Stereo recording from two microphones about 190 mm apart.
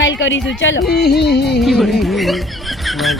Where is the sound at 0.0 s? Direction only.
75° left (ahead or behind).